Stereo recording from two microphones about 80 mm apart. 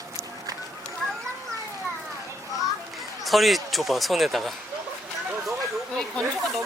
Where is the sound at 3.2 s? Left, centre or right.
Centre.